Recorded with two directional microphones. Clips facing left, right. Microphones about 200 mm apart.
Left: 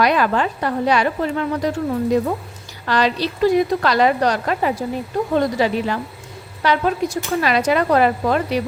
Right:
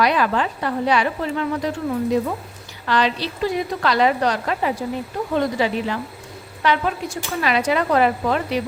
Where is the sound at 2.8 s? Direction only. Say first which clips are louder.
Left 2 dB; 40° left (ahead or behind).